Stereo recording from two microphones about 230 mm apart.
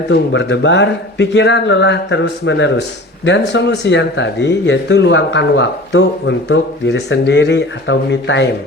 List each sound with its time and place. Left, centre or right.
0.1 s speech: left